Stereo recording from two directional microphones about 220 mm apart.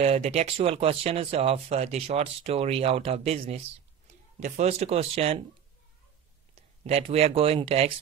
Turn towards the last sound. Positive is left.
turn(degrees=-25)  # may be behind; listen again after turning